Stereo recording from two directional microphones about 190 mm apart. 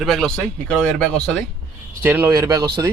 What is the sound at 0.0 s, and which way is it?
Speech, centre (ahead or behind).